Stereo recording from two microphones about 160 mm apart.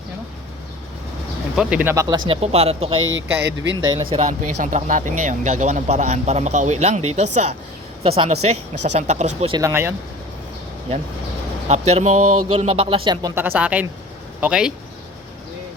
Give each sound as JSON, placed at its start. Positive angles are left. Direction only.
{"t": 1.5, "sound": "speech", "side_deg": -10}
{"t": 2.0, "sound": "speech", "side_deg": -30}
{"t": 3.4, "sound": "speech", "side_deg": -90}
{"t": 3.8, "sound": "speech", "side_deg": -30}
{"t": 4.3, "sound": "speech", "side_deg": -50}
{"t": 9.5, "sound": "speech", "side_deg": -20}
{"t": 11.7, "sound": "speech", "side_deg": -40}
{"t": 13.3, "sound": "speech", "side_deg": -10}